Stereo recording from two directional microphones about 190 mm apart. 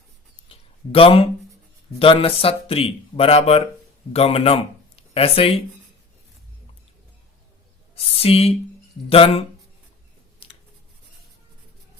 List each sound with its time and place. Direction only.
0.4 s a sound: 30° left (ahead or behind)
2.0 s speech: 30° left (ahead or behind)
7.9 s speech: 30° left (ahead or behind)